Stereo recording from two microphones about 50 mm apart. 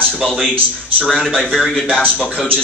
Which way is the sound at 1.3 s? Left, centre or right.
Centre.